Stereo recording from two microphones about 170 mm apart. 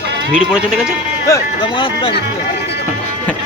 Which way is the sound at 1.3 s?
30° left (ahead or behind).